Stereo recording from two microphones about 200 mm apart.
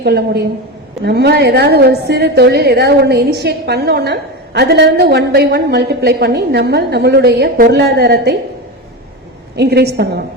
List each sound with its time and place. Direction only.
0.0 s a woman's voice: 55° right (ahead or behind)
9.6 s a woman's voice: 55° right (ahead or behind)